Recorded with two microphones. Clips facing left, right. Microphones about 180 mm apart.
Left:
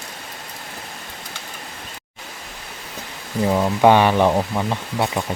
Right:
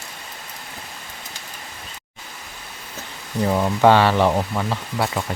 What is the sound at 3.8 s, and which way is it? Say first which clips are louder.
Speech: left 1 dB; 15° left (ahead or behind).